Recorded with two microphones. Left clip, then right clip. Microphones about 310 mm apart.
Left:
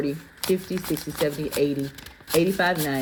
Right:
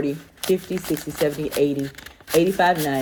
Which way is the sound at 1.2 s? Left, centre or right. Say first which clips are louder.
Right 3 dB; right.